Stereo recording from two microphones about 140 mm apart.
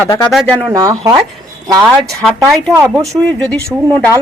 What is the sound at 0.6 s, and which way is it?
Speech, 25° right (ahead or behind).